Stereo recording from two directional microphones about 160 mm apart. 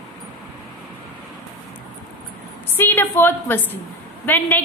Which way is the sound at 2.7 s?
15° left (ahead or behind).